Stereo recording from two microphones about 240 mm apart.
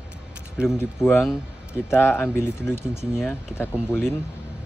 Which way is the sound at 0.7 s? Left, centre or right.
Centre.